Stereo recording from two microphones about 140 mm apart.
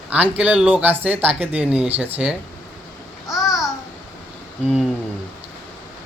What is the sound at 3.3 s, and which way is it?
Babbling, centre (ahead or behind).